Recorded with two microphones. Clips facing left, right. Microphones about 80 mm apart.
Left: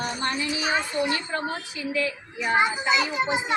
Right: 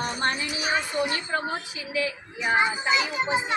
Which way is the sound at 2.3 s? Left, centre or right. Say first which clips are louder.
Left 1 dB; centre.